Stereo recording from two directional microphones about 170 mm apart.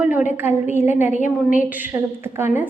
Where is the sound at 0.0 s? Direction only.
10° right (ahead or behind).